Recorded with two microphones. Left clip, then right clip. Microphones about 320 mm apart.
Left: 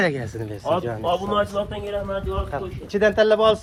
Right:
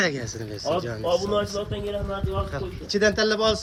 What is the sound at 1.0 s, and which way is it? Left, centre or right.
Speech, left.